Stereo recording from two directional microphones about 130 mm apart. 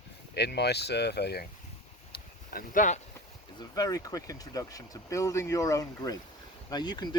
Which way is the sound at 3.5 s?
30° left (ahead or behind).